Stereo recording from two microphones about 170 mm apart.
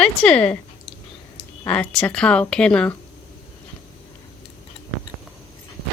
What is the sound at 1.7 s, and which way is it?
Speech, 10° left (ahead or behind).